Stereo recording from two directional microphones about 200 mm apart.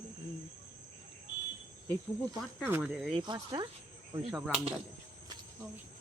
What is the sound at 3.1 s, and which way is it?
Speech, 20° right (ahead or behind).